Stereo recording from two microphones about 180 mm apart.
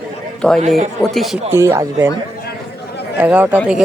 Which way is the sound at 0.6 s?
40° right (ahead or behind).